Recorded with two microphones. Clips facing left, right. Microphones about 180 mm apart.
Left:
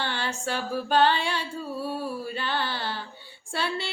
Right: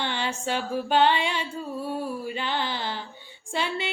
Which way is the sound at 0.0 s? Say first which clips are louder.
Right 1 dB; 15° right (ahead or behind).